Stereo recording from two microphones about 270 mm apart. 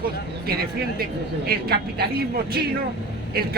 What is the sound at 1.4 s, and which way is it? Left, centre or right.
Speech, right.